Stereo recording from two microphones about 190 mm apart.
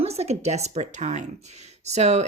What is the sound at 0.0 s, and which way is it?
Speech, 35° right (ahead or behind).